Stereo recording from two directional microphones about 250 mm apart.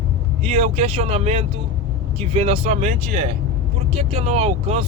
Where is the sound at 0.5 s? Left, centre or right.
Right.